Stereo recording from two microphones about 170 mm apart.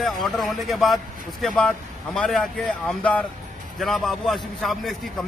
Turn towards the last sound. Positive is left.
turn(degrees=0)  # may be behind; listen again after turning